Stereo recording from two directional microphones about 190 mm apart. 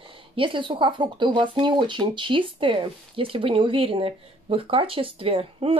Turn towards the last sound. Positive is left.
turn(degrees=-30)  # may be behind; listen again after turning